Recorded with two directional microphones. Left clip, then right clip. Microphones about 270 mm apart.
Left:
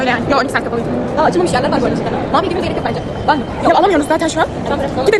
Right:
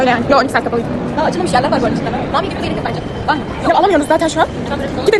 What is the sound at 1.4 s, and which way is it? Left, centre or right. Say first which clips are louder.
Speech: right 1 dB; centre.